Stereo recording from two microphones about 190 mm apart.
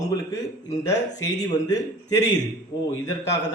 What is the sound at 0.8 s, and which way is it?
A man's voice, 20° left (ahead or behind).